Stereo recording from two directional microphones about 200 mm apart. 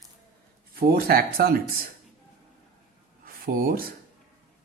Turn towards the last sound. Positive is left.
turn(degrees=-45)  # may be behind; listen again after turning